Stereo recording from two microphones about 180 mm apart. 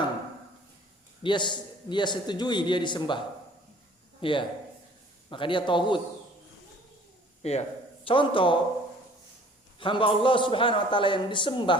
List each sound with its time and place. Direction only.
1.2 s a man's voice: 25° left (ahead or behind)
4.2 s a man's voice: 30° left (ahead or behind)
7.4 s a man's voice: 35° left (ahead or behind)
9.8 s a man's voice: 30° left (ahead or behind)